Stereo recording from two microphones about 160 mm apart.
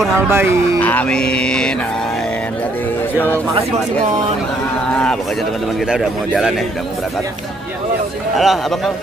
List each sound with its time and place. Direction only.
0.3 s speech: 15° right (ahead or behind)
0.7 s music: 10° left (ahead or behind)
5.9 s music: 5° right (ahead or behind)
8.4 s music: centre (ahead or behind)